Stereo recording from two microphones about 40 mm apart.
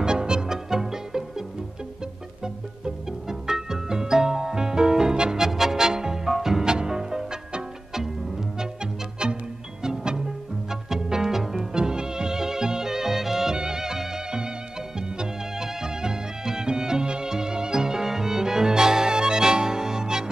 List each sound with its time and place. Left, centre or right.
0.0 s music: centre
2.4 s music: centre
6.6 s music: centre
9.2 s music: right
11.7 s music: centre